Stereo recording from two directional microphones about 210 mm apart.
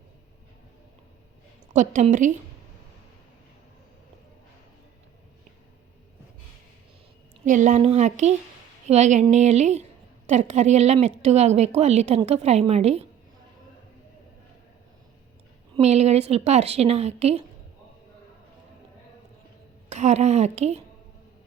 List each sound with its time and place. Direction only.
1.7 s speech: 35° right (ahead or behind)
7.4 s speech: 35° right (ahead or behind)
15.7 s speech: 30° right (ahead or behind)
19.9 s speech: 35° right (ahead or behind)